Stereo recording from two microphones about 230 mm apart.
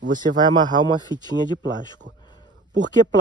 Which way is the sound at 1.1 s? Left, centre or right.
Centre.